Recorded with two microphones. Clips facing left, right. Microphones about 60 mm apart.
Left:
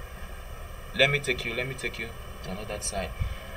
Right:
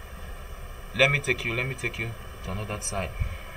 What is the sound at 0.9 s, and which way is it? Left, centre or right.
Speech, centre.